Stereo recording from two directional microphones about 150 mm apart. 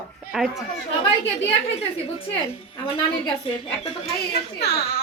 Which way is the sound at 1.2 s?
40° left (ahead or behind).